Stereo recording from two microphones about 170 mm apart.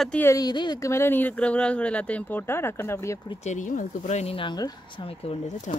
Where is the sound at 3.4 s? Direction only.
45° left (ahead or behind).